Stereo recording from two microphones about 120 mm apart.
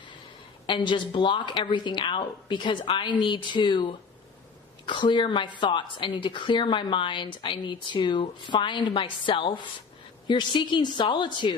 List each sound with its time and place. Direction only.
0.7 s a woman's voice: 40° left (ahead or behind)